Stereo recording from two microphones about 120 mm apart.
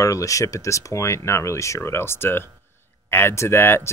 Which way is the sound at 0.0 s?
25° left (ahead or behind).